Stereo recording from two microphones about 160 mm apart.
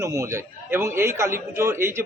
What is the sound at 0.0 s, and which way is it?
A man's voice, 15° right (ahead or behind).